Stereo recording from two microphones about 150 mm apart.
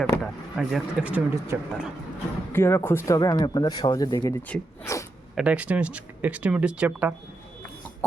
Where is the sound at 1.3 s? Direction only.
20° right (ahead or behind).